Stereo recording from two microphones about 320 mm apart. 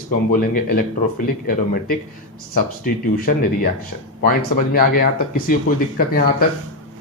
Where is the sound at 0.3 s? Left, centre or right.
Left.